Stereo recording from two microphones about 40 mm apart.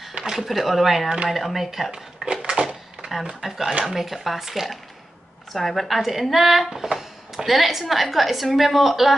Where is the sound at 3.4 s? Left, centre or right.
Centre.